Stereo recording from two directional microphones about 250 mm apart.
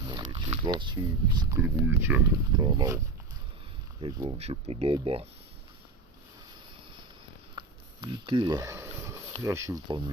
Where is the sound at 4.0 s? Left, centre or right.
Centre.